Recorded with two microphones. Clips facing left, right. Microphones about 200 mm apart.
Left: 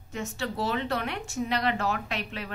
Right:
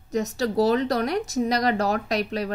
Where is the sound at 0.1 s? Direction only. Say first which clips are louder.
Right 9 dB; 40° right (ahead or behind).